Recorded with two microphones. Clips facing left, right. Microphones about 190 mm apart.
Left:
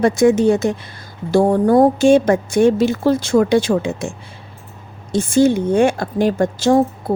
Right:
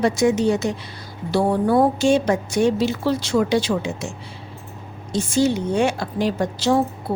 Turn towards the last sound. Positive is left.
turn(degrees=50)  # may be behind; listen again after turning